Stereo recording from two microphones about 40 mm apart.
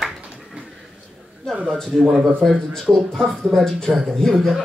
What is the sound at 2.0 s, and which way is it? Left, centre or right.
Speech, centre.